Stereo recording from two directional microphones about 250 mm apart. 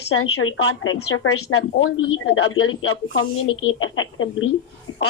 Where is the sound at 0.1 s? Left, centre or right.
Left.